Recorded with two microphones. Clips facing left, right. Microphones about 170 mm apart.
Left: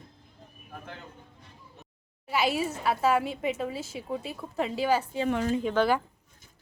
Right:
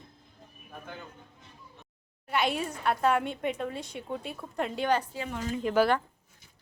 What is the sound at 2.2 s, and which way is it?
A woman's voice, 5° left (ahead or behind).